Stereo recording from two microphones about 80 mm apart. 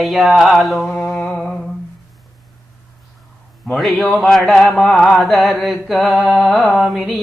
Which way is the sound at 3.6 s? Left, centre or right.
Centre.